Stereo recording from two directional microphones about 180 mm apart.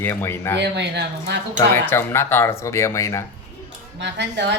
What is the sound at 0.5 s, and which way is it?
Speech, 70° right (ahead or behind).